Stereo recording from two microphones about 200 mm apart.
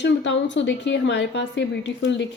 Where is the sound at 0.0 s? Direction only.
65° left (ahead or behind).